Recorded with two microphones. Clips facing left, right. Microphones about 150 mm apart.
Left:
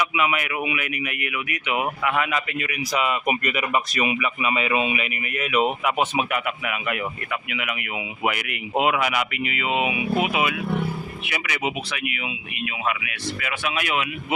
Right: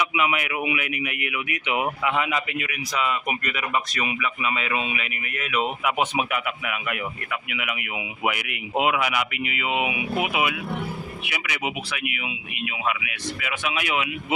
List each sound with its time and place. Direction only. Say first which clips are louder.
0.0 s speech: left 1 dB; 20° right (ahead or behind)
2.9 s speech: left 3 dB; 10° left (ahead or behind)
5.8 s a man's voice: left 1 dB; 10° right (ahead or behind)